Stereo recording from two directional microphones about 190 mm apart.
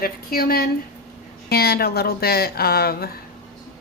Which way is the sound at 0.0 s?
50° left (ahead or behind).